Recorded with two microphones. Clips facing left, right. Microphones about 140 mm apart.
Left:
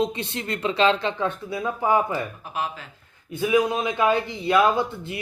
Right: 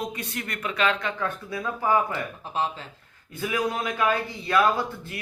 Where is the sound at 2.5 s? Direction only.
30° right (ahead or behind).